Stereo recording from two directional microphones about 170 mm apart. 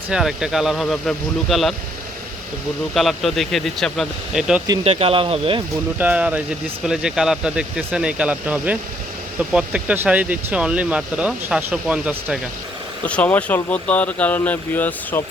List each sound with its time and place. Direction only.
0.1 s speech: 5° right (ahead or behind)
2.9 s speech: centre (ahead or behind)
4.8 s speech: 35° right (ahead or behind)
6.0 s speech: 10° right (ahead or behind)
13.1 s speech: 10° left (ahead or behind)